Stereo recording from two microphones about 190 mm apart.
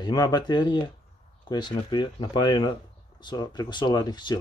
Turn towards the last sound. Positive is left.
turn(degrees=20)  # may be behind; listen again after turning